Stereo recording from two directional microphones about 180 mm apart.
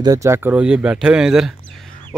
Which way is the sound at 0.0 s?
20° right (ahead or behind).